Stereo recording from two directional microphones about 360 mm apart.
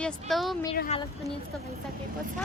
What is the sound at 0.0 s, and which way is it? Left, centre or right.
Speech, centre.